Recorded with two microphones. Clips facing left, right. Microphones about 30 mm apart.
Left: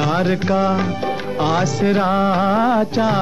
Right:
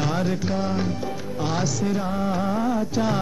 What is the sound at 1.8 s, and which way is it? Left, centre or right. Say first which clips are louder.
Music: left 9 dB; left.